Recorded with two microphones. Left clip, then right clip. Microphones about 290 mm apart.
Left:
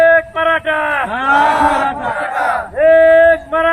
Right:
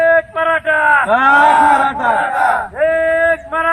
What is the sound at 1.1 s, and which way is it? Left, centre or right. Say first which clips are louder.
Cattle: right 5 dB; centre.